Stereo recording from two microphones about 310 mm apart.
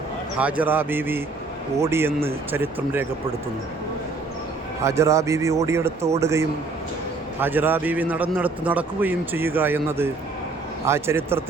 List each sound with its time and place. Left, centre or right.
0.3 s a man's voice: centre
4.8 s a man's voice: centre